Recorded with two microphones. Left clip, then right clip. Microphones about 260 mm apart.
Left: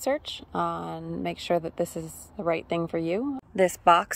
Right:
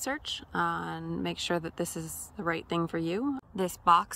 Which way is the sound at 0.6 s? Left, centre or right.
Right.